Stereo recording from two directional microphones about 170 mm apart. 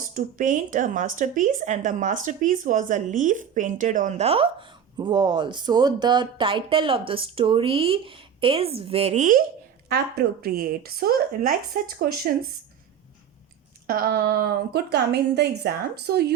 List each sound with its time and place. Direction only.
0.0 s speech: 50° right (ahead or behind)
9.9 s speech: 65° right (ahead or behind)
13.8 s a woman's voice: 60° right (ahead or behind)